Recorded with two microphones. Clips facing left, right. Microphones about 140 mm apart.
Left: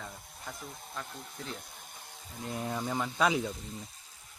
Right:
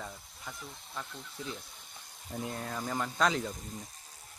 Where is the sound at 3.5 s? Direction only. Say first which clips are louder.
Left 1 dB; 45° right (ahead or behind).